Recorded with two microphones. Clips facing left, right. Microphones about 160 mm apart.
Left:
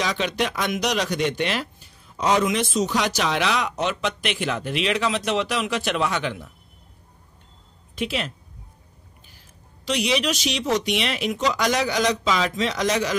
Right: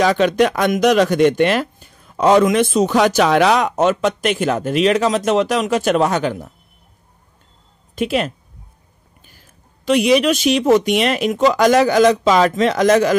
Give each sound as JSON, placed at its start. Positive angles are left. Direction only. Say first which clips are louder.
{"t": 0.0, "sound": "speech", "louder": "right 10 dB", "side_deg": -50}
{"t": 7.9, "sound": "a woman's voice", "louder": "right 8 dB", "side_deg": -50}
{"t": 9.8, "sound": "speech", "louder": "right 9 dB", "side_deg": -50}